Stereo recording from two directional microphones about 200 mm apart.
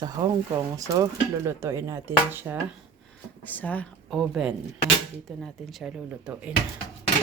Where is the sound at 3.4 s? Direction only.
10° left (ahead or behind).